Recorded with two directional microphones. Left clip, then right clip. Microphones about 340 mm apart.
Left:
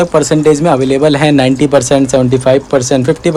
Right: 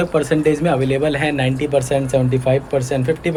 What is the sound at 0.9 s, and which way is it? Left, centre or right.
Speech, left.